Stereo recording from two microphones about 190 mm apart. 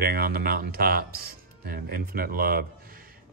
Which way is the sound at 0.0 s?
50° right (ahead or behind).